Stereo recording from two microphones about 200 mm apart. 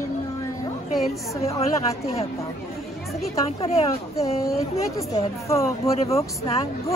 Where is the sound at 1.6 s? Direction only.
30° left (ahead or behind).